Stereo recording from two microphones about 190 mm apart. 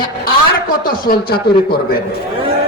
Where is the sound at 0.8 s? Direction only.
50° left (ahead or behind).